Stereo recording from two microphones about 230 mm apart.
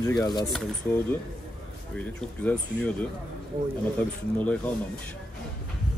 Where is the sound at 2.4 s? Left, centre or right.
Centre.